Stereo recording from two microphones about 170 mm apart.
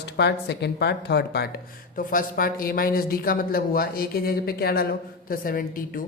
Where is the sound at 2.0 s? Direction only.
55° left (ahead or behind).